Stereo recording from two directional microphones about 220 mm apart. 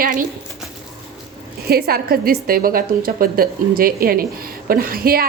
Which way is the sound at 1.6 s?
45° right (ahead or behind).